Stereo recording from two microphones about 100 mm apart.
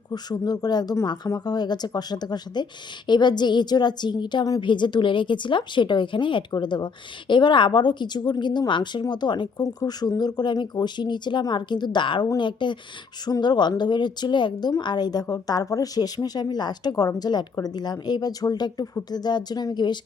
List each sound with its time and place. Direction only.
0.1 s a woman's voice: 40° left (ahead or behind)